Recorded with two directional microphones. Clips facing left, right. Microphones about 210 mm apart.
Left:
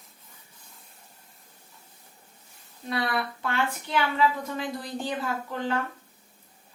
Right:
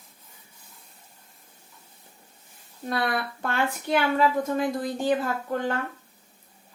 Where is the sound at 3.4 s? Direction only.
50° right (ahead or behind).